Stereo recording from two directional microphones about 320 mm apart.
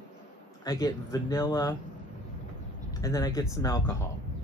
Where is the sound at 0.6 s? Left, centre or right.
Centre.